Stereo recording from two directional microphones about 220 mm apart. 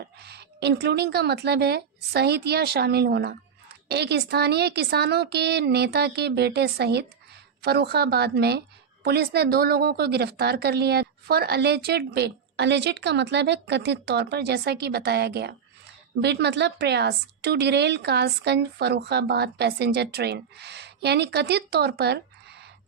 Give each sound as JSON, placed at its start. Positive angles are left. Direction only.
{"t": 0.2, "sound": "a woman's voice", "side_deg": -50}